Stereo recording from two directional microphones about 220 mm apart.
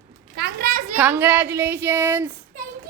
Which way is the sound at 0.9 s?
10° right (ahead or behind).